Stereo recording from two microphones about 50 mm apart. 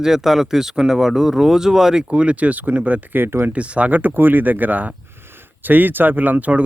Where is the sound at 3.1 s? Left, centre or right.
Right.